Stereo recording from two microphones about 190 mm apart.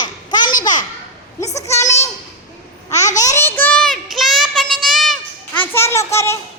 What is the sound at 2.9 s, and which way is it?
Babbling, 35° left (ahead or behind).